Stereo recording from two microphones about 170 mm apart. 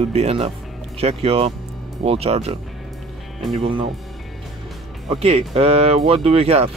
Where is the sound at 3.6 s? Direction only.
30° right (ahead or behind).